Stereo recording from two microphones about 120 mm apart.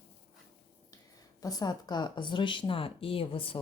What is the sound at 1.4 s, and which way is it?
Speech, 35° left (ahead or behind).